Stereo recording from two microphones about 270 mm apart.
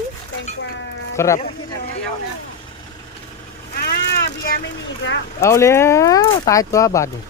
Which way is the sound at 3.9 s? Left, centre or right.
Left.